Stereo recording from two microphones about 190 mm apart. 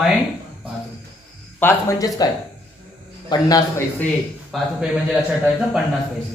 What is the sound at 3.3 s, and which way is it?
Speech, 20° left (ahead or behind).